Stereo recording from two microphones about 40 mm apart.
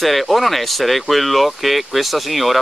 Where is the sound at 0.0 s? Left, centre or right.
Centre.